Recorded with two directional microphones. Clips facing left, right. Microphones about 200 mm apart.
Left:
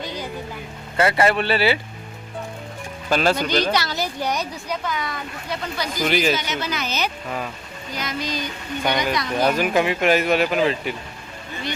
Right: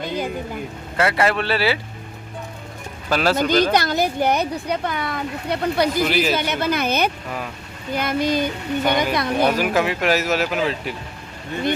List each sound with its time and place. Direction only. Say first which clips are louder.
0.0 s a sound: right 5 dB; 55° right (ahead or behind)
0.9 s speech: left 1 dB; centre (ahead or behind)
3.1 s speech: even; 5° right (ahead or behind)
3.3 s a woman's voice: right 4 dB; 50° right (ahead or behind)
6.1 s speech: even; 5° right (ahead or behind)
6.3 s a woman's voice: right 5 dB; 55° right (ahead or behind)
9.6 s speech: even; centre (ahead or behind)